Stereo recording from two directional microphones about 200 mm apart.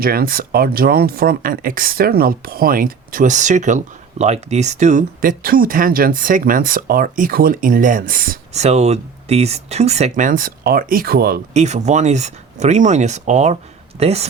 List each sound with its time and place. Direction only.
0.0 s speech: 50° right (ahead or behind)
11.5 s speech: 35° right (ahead or behind)